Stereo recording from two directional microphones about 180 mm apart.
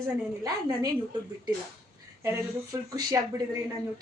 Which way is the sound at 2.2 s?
20° right (ahead or behind).